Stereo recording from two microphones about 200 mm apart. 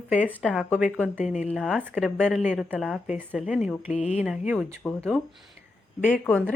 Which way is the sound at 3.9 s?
30° left (ahead or behind).